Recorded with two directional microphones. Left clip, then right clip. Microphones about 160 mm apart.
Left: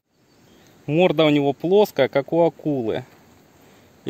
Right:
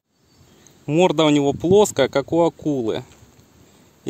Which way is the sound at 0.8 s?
25° right (ahead or behind).